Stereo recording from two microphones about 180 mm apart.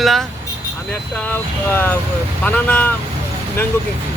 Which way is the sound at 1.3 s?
10° left (ahead or behind).